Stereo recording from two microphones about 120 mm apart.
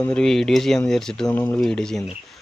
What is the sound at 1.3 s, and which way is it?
Speech, 15° left (ahead or behind).